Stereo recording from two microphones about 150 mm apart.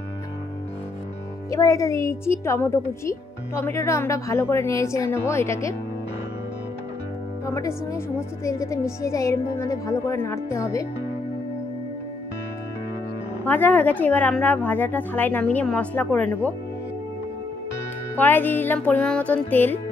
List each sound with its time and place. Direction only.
1.5 s a woman's voice: 20° left (ahead or behind)
7.4 s a woman's voice: 20° left (ahead or behind)
13.4 s speech: 15° left (ahead or behind)
18.1 s speech: 10° left (ahead or behind)